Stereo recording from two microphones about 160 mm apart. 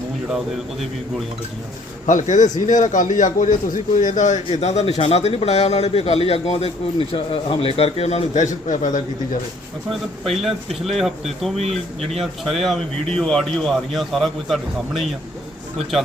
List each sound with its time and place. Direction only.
0.3 s speech: centre (ahead or behind)
2.0 s a man's voice: 50° left (ahead or behind)
10.2 s speech: centre (ahead or behind)
11.6 s speech: 40° right (ahead or behind)
12.2 s speech: centre (ahead or behind)